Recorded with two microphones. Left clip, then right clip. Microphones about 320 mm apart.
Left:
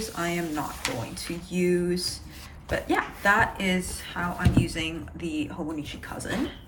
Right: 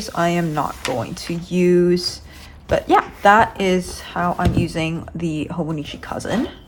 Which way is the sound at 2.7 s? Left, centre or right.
Centre.